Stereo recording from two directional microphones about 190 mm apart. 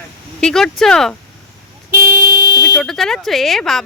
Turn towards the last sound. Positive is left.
turn(degrees=0)  # may be behind; listen again after turning